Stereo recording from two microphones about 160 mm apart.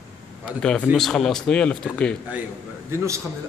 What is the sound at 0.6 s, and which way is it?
Speech, 5° left (ahead or behind).